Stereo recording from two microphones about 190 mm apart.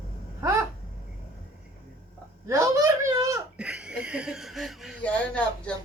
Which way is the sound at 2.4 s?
15° right (ahead or behind).